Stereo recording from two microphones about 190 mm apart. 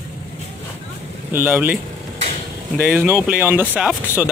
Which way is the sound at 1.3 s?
10° right (ahead or behind).